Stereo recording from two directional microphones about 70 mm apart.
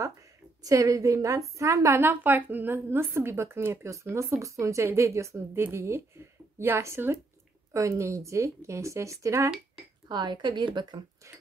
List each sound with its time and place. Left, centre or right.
0.7 s a woman's voice: right
2.0 s a woman's voice: right
7.7 s a woman's voice: right
10.0 s a woman's voice: right